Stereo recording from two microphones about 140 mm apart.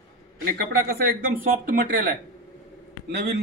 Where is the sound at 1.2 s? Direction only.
90° right.